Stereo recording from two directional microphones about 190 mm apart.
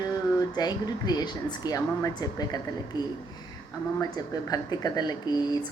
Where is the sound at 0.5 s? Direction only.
20° left (ahead or behind).